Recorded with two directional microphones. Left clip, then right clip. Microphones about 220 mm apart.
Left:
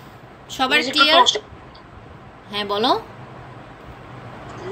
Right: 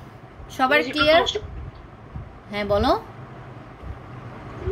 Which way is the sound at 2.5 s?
25° right (ahead or behind).